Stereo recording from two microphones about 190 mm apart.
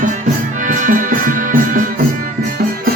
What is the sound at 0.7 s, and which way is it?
Music, 45° right (ahead or behind).